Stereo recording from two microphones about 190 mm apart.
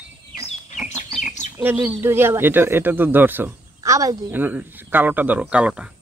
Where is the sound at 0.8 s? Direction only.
Centre (ahead or behind).